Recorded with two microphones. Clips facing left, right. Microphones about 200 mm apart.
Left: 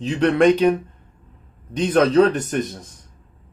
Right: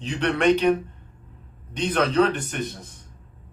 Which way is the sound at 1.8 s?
45° left (ahead or behind).